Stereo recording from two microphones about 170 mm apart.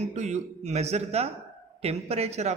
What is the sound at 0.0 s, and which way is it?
A man's voice, 40° right (ahead or behind).